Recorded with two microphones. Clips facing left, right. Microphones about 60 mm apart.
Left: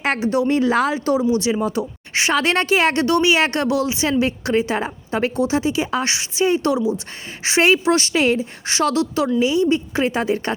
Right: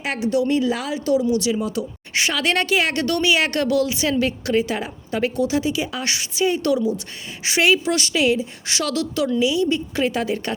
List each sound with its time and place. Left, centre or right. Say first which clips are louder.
0.2 s a woman's voice: right 2 dB; left